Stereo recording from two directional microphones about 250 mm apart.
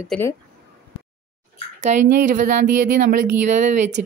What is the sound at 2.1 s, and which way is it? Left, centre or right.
Speech, right.